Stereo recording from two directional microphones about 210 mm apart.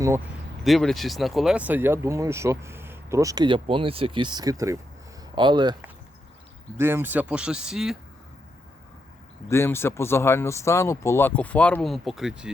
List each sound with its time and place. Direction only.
0.6 s speech: centre (ahead or behind); by 5.7 s 20° right (ahead or behind)
6.7 s speech: 10° right (ahead or behind)
9.5 s speech: 10° left (ahead or behind)